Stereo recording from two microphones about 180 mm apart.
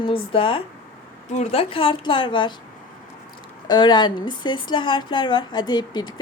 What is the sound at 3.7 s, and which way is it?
Speech, 25° left (ahead or behind).